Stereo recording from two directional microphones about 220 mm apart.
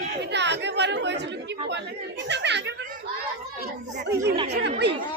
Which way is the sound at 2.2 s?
50° right (ahead or behind).